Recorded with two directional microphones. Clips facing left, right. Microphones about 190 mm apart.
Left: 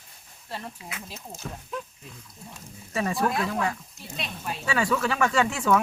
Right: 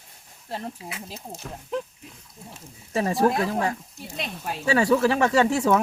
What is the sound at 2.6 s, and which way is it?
Speech, 25° right (ahead or behind).